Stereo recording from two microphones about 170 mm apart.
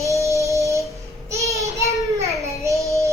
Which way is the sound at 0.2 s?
15° right (ahead or behind).